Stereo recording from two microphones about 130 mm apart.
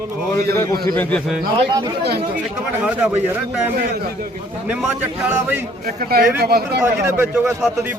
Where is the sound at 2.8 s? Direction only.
10° right (ahead or behind).